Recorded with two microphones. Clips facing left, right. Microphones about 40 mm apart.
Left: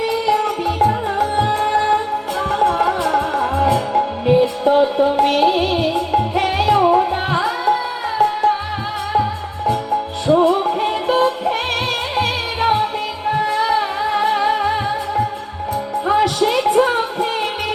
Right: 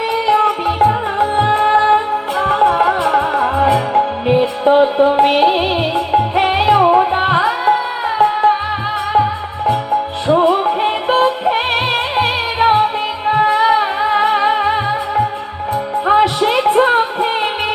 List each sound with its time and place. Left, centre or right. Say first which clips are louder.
0.3 s music: right 6 dB; right
10.2 s music: right 1 dB; right